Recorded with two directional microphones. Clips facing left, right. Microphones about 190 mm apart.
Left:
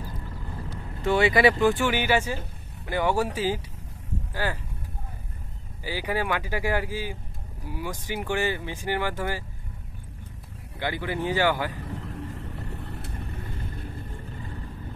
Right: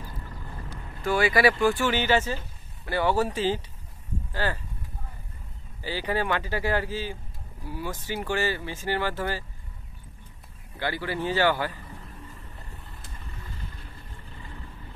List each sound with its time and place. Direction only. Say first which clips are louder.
1.0 s speech: left 2 dB; 25° left (ahead or behind)
5.9 s speech: even; 10° left (ahead or behind)
10.8 s speech: left 1 dB; 15° left (ahead or behind)
11.8 s vehicle: left 9 dB; 85° left; by 13.8 s 55° left (ahead or behind)